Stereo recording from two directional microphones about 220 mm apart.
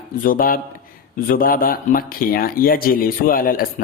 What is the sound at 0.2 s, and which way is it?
Speech, 40° left (ahead or behind).